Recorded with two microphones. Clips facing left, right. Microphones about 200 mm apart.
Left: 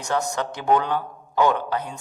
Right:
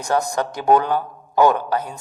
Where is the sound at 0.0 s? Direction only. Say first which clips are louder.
Right 4 dB; 35° right (ahead or behind).